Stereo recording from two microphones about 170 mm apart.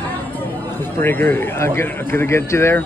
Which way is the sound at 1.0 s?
10° left (ahead or behind).